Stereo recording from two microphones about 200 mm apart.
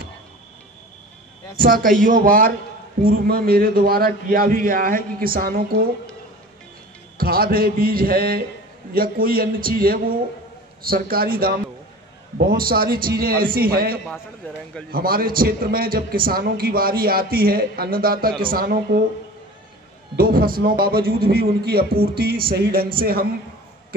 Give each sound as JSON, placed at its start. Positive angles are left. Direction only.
{"t": 1.6, "sound": "a man's voice", "side_deg": -45}
{"t": 7.2, "sound": "a man's voice", "side_deg": -50}
{"t": 14.4, "sound": "a man's voice", "side_deg": 10}
{"t": 14.9, "sound": "a man's voice", "side_deg": -45}
{"t": 20.2, "sound": "a man's voice", "side_deg": -45}